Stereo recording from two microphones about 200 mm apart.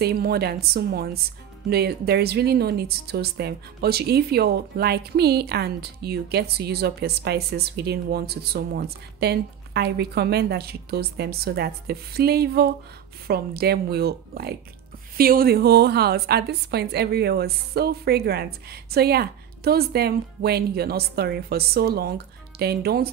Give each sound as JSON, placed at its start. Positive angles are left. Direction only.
{"t": 0.0, "sound": "speech", "side_deg": -50}